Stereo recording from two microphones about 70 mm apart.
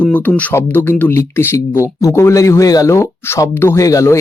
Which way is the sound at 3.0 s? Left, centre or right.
Left.